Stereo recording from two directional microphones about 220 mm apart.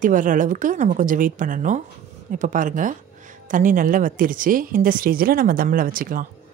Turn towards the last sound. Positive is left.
turn(degrees=-40)  # may be behind; listen again after turning